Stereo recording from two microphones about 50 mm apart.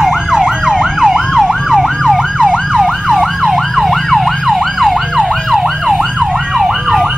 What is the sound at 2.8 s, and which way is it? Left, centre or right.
Emergency vehicle, centre.